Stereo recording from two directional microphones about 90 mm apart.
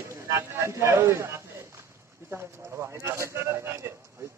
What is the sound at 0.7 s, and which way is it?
A man's voice, 30° right (ahead or behind).